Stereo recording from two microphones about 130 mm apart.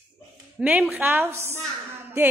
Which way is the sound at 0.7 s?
10° right (ahead or behind).